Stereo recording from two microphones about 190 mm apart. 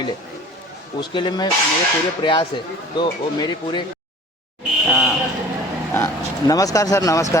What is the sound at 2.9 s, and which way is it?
Speech, 25° left (ahead or behind).